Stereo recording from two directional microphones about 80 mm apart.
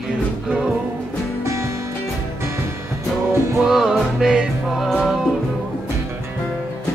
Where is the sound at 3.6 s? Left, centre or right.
Centre.